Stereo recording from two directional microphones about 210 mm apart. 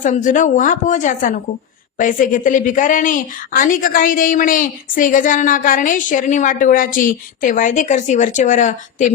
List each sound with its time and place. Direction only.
0.0 s a woman's voice: 40° left (ahead or behind)